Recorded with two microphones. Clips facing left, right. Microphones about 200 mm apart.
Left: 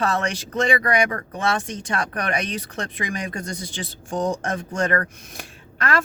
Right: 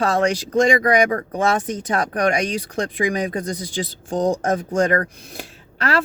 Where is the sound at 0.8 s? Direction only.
25° right (ahead or behind).